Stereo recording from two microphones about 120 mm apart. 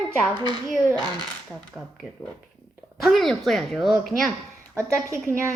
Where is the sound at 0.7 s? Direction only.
15° right (ahead or behind).